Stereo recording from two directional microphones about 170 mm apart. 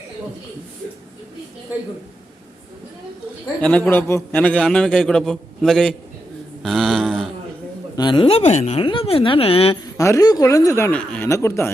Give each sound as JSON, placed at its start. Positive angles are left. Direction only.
{"t": 3.6, "sound": "a man's voice", "side_deg": 10}
{"t": 6.6, "sound": "mantra", "side_deg": 0}
{"t": 7.9, "sound": "speech", "side_deg": 25}
{"t": 10.0, "sound": "speech", "side_deg": 20}